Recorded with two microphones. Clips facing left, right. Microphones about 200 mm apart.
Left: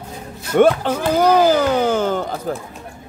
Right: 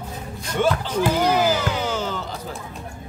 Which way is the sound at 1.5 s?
55° left (ahead or behind).